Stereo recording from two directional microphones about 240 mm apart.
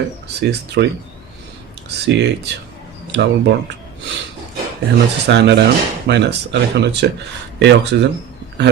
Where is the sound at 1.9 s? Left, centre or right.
Right.